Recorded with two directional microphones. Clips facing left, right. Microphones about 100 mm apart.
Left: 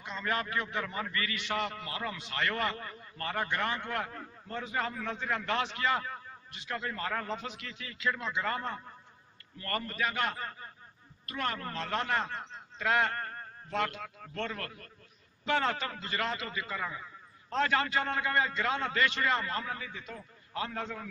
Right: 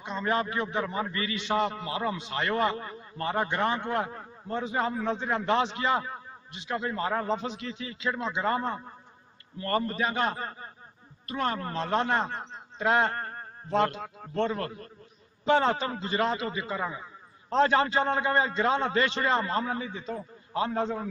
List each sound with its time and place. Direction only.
0.0 s a man's voice: 25° right (ahead or behind)